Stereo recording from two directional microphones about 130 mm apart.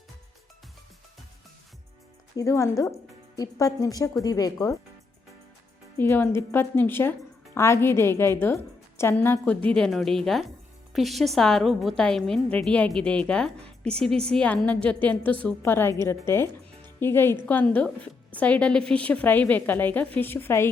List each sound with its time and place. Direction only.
2.3 s a woman's voice: 25° left (ahead or behind)
6.0 s a woman's voice: 15° left (ahead or behind)